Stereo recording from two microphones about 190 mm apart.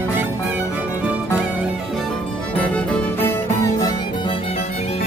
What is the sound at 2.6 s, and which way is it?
Music, 10° left (ahead or behind).